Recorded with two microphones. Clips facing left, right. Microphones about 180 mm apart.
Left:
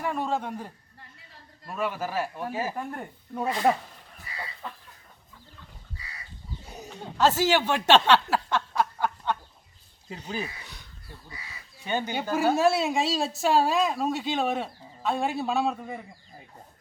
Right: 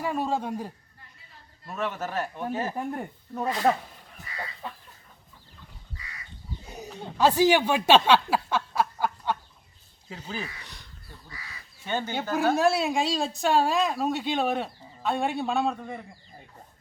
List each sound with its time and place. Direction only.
0.0 s a man's voice: 10° right (ahead or behind)
1.6 s speech: 10° left (ahead or behind)
2.7 s a man's voice: 15° right (ahead or behind)
3.3 s speech: 5° left (ahead or behind)
7.2 s a sound: 15° right (ahead or behind)
10.1 s speech: 15° left (ahead or behind)
10.6 s a sound: 5° left (ahead or behind)
11.9 s a woman's voice: 15° left (ahead or behind)